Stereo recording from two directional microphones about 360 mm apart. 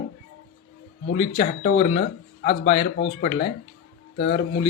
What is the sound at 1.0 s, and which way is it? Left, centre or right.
Speech, centre.